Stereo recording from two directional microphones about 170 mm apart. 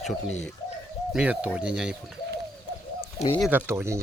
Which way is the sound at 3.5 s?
15° right (ahead or behind).